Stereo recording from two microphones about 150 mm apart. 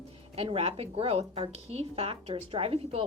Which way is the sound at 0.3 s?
40° right (ahead or behind).